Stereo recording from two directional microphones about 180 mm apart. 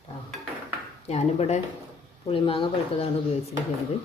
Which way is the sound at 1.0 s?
35° left (ahead or behind).